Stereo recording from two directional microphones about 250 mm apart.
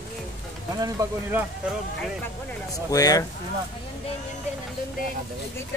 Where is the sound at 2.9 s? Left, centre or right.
Centre.